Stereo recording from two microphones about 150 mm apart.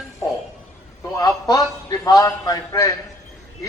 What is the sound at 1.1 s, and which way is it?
A man's voice, 25° left (ahead or behind).